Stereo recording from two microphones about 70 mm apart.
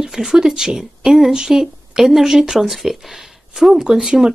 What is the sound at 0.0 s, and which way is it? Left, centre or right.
Speech, centre.